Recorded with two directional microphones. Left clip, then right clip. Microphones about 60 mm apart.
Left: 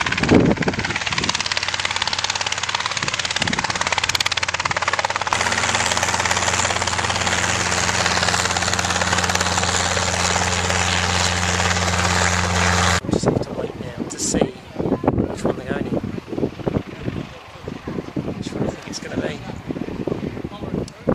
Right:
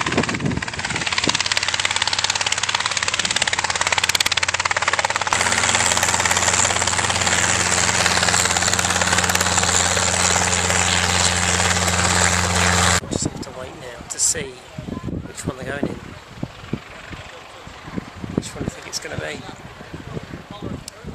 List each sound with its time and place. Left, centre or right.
0.0 s vehicle: left
1.1 s jackhammer: centre
14.2 s a sound: centre